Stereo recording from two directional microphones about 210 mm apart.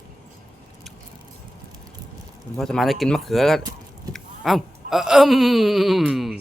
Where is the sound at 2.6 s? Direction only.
Centre (ahead or behind).